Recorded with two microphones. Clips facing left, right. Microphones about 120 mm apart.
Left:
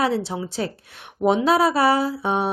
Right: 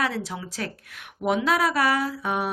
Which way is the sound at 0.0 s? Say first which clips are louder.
Left 6 dB; 30° left (ahead or behind).